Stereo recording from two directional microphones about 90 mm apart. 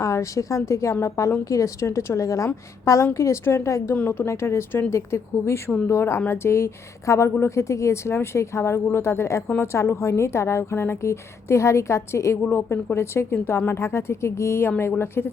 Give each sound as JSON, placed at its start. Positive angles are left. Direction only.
{"t": 0.0, "sound": "a woman's voice", "side_deg": 35}
{"t": 3.9, "sound": "a woman's voice", "side_deg": 20}